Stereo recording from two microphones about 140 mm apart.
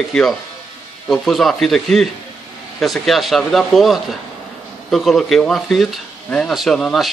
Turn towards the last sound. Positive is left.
turn(degrees=0)  # may be behind; listen again after turning